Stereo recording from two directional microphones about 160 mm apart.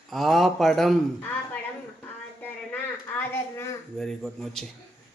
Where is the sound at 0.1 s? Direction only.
Centre (ahead or behind).